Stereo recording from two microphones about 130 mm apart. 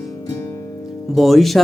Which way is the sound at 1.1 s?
Centre (ahead or behind).